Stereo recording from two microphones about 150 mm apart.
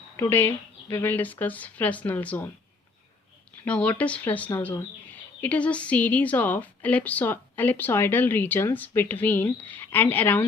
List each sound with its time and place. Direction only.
0.2 s speech: 15° left (ahead or behind)
3.7 s speech: 10° left (ahead or behind)